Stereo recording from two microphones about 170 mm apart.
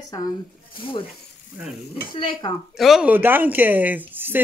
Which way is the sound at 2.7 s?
Centre (ahead or behind).